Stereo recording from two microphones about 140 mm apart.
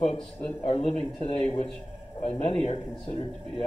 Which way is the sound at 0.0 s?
45° left (ahead or behind).